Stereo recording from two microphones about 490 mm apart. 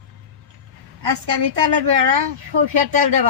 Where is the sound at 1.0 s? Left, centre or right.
Right.